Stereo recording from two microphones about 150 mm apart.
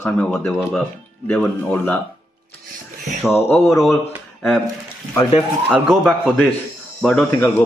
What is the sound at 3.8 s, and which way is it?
Speech, centre (ahead or behind).